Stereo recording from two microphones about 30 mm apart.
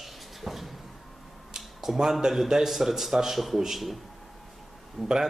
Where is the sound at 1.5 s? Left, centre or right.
Centre.